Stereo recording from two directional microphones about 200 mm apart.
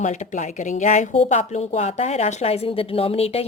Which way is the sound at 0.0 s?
35° left (ahead or behind).